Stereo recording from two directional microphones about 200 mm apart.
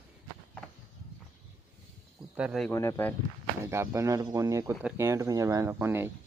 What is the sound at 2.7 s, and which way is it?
Speech, 15° left (ahead or behind).